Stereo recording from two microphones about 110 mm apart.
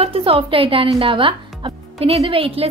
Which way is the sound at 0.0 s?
60° right (ahead or behind).